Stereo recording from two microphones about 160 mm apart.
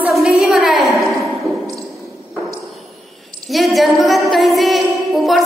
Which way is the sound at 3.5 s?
Centre (ahead or behind).